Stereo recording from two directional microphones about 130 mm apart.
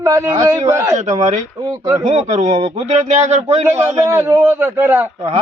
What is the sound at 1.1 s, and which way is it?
A man's voice, 65° right (ahead or behind).